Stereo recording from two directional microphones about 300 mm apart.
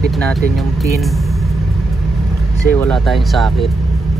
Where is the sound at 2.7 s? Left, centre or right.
Centre.